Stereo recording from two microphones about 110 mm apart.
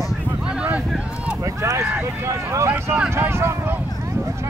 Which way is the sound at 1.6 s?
25° right (ahead or behind).